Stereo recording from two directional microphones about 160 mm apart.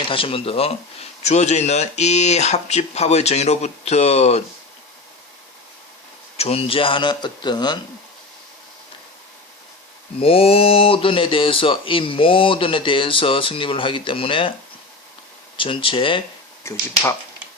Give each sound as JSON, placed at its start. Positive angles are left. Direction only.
{"t": 0.1, "sound": "speech", "side_deg": 35}
{"t": 6.3, "sound": "speech", "side_deg": 40}
{"t": 10.2, "sound": "speech", "side_deg": 35}
{"t": 15.5, "sound": "speech", "side_deg": 35}
{"t": 16.6, "sound": "speech", "side_deg": 15}